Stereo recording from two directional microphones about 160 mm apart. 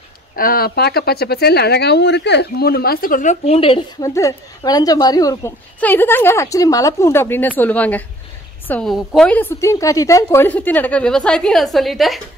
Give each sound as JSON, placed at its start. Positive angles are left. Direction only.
{"t": 0.4, "sound": "speech", "side_deg": 65}
{"t": 3.4, "sound": "speech", "side_deg": 35}
{"t": 4.0, "sound": "a woman's voice", "side_deg": 20}